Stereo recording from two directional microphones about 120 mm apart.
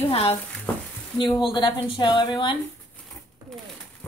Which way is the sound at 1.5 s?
40° left (ahead or behind).